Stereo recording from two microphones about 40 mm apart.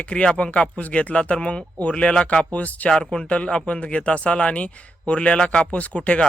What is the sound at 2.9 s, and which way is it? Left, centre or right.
Speech, centre.